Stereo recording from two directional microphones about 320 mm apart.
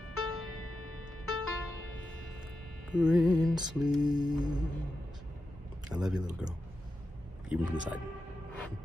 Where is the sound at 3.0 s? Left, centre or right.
Centre.